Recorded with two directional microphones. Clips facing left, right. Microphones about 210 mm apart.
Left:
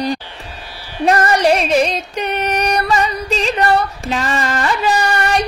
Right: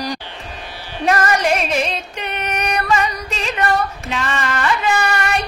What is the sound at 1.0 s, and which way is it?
Music, 35° left (ahead or behind).